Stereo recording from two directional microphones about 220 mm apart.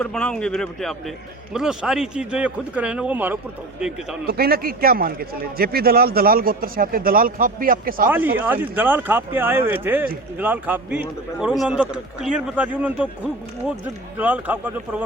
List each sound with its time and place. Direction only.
0.0 s a man's voice: 5° left (ahead or behind)
4.3 s a man's voice: 45° right (ahead or behind)
8.0 s a man's voice: 10° right (ahead or behind)